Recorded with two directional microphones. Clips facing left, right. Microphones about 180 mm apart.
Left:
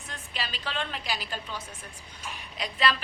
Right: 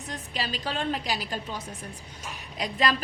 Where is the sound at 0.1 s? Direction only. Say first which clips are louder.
Right 4 dB; 40° right (ahead or behind).